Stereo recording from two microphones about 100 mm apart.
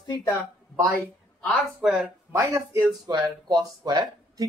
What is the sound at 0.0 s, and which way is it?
Speech, 40° left (ahead or behind).